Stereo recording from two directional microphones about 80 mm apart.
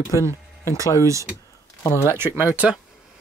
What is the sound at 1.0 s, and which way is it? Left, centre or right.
Speech, right.